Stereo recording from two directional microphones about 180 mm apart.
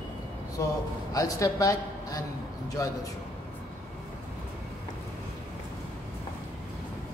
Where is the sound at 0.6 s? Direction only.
20° left (ahead or behind).